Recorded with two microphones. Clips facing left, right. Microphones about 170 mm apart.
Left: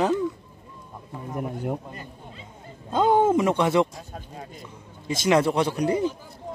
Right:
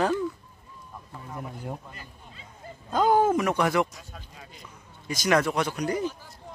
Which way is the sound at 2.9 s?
25° left (ahead or behind).